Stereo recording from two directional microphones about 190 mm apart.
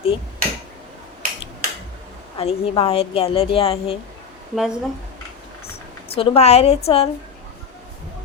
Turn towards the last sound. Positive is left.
turn(degrees=30)  # may be behind; listen again after turning